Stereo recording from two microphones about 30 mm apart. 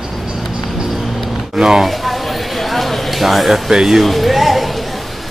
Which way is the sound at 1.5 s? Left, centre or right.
Centre.